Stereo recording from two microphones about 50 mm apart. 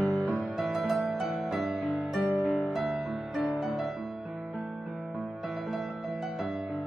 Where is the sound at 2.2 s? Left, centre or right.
Left.